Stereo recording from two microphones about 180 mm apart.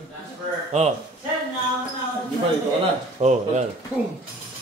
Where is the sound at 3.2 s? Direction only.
40° right (ahead or behind).